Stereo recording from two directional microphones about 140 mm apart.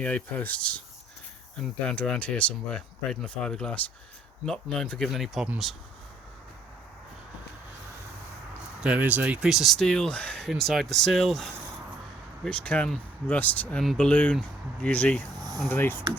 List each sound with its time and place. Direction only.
0.0 s speech: 10° left (ahead or behind)
8.5 s speech: 10° right (ahead or behind); by 15.2 s 10° left (ahead or behind)
15.4 s a sound: 30° right (ahead or behind)
15.6 s speech: 15° left (ahead or behind)